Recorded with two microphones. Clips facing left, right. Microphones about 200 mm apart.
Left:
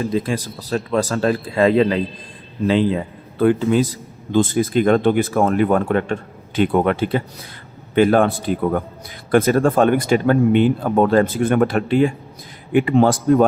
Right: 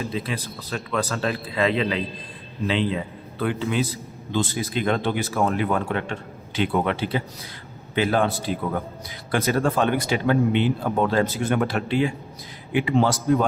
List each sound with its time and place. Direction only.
0.0 s speech: 45° left (ahead or behind)